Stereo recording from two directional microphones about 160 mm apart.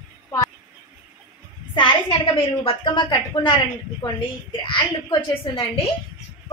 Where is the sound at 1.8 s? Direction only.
35° left (ahead or behind).